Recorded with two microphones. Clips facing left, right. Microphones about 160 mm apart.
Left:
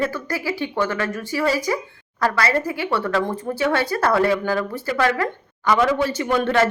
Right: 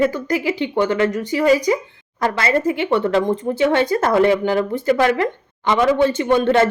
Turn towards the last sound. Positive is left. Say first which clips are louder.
# right 4 dB
turn(degrees=-25)  # may be behind; listen again after turning